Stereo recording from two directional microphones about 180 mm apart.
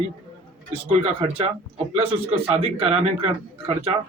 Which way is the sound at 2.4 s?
35° right (ahead or behind).